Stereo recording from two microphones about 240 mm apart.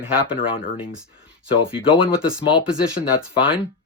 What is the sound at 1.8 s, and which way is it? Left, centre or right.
Speech, left.